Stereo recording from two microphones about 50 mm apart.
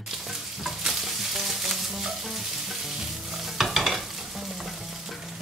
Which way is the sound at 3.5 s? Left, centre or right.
Centre.